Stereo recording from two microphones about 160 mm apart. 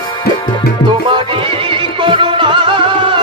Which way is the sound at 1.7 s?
30° right (ahead or behind).